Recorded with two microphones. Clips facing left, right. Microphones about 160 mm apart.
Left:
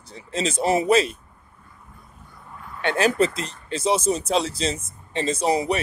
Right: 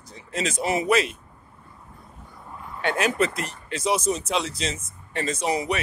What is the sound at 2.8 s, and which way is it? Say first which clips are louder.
Speech: left 3 dB; 30° left (ahead or behind).